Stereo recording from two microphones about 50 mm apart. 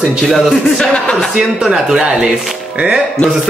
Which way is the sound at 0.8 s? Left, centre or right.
Centre.